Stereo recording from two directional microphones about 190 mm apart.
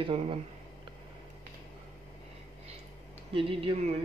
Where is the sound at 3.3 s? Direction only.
30° right (ahead or behind).